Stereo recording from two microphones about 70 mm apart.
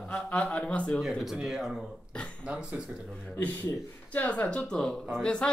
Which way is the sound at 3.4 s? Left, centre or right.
Left.